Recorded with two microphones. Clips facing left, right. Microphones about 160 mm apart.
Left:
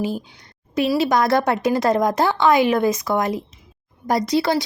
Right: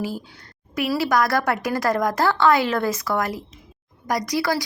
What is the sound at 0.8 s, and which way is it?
A woman's voice, 20° left (ahead or behind).